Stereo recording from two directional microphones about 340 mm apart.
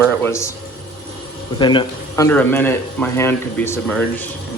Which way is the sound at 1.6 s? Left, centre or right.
Centre.